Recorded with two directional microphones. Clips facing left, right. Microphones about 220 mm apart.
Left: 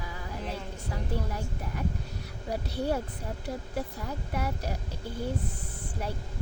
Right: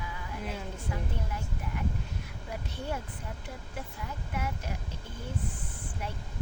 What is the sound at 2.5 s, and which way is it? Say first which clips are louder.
Speech: left 7 dB; 35° left (ahead or behind).